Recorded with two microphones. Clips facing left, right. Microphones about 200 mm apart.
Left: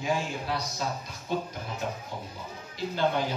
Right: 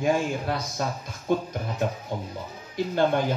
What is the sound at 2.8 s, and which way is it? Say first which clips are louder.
Speech: right 6 dB; 50° right (ahead or behind).